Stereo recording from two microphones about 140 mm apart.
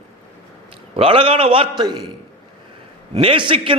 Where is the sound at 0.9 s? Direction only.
40° right (ahead or behind).